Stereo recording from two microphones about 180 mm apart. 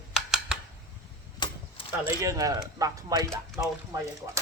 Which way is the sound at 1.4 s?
30° left (ahead or behind).